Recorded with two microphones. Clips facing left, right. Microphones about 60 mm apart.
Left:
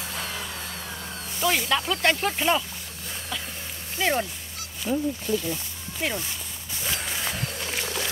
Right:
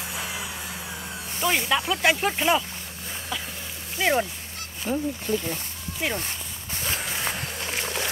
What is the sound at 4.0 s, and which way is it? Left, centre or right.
Speech, centre.